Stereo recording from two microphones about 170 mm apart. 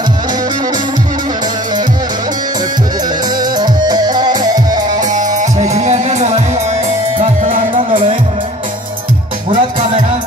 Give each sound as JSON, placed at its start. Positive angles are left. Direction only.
{"t": 3.3, "sound": "music", "side_deg": -25}
{"t": 5.3, "sound": "music", "side_deg": -45}
{"t": 9.5, "sound": "music", "side_deg": -45}